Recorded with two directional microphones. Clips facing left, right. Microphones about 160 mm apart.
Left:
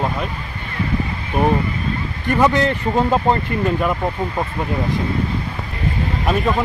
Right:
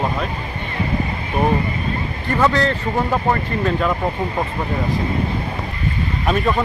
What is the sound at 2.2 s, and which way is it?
A man's voice, 20° left (ahead or behind).